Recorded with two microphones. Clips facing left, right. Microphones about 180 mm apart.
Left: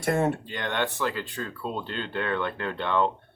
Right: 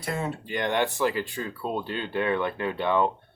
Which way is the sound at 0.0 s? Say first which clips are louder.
Left 6 dB; 50° left (ahead or behind).